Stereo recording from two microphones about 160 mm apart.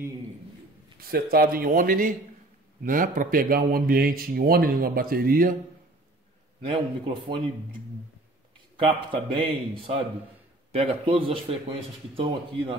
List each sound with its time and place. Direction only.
1.0 s speech: 70° right (ahead or behind)
6.6 s speech: 35° right (ahead or behind)
8.7 s speech: 35° right (ahead or behind)